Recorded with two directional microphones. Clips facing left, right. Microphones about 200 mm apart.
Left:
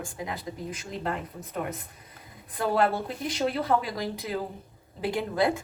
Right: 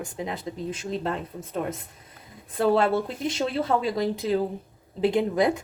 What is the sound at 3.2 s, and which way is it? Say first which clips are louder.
Speech: right 2 dB; 25° right (ahead or behind).